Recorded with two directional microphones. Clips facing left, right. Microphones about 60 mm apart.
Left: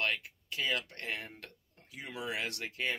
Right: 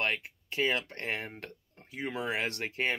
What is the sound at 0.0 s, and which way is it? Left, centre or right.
Speech, right.